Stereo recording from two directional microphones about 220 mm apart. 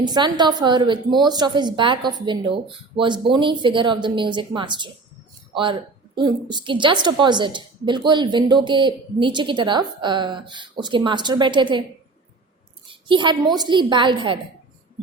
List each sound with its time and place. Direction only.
0.0 s a woman's voice: 20° right (ahead or behind)
6.1 s a woman's voice: 20° right (ahead or behind)
12.9 s a sound: 20° right (ahead or behind)
13.6 s a woman's voice: 20° right (ahead or behind)